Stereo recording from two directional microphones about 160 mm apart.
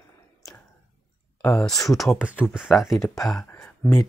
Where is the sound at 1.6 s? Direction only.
Centre (ahead or behind).